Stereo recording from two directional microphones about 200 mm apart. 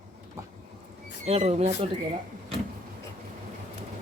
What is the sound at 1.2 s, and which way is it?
Speech, 30° right (ahead or behind).